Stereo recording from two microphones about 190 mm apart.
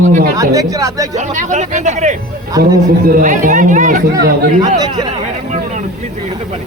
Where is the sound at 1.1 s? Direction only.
40° right (ahead or behind).